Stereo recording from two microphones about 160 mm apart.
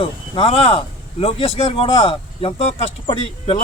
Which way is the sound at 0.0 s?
35° left (ahead or behind).